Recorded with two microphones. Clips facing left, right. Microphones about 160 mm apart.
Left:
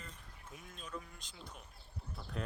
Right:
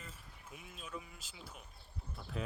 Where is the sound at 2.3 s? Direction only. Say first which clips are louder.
Right 1 dB; centre (ahead or behind).